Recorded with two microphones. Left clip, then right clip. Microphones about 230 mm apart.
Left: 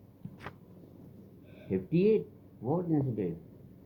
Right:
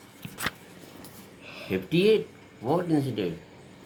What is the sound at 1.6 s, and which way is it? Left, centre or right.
Speech, right.